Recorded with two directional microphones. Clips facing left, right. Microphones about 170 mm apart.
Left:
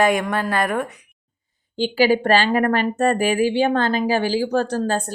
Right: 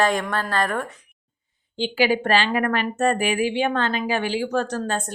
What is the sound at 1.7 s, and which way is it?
A woman's voice, 40° left (ahead or behind).